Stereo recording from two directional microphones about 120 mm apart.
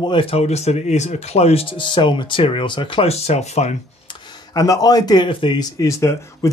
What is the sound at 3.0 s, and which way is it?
Speech, 60° left (ahead or behind).